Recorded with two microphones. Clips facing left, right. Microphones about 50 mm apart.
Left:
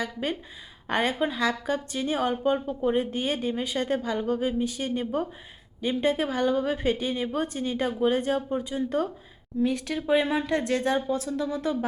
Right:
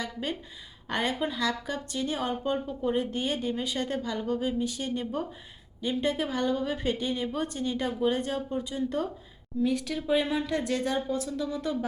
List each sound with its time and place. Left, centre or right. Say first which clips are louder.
0.0 s a woman's voice: left 3 dB; centre
10.2 s a woman's voice: left 4 dB; centre
11.3 s a woman's voice: left 3 dB; centre